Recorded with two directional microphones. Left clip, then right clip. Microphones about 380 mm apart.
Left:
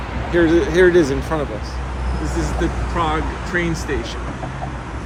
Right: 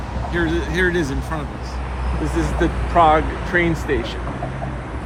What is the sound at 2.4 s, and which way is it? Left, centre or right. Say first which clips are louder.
Speech: right 2 dB; centre.